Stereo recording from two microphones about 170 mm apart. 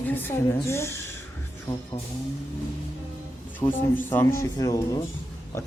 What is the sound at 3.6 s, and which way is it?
A woman's voice, 10° left (ahead or behind).